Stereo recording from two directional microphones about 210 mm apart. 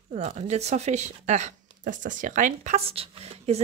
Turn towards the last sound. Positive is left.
turn(degrees=-30)  # may be behind; listen again after turning